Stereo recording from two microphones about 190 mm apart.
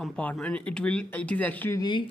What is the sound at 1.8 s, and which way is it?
Speech, 25° left (ahead or behind).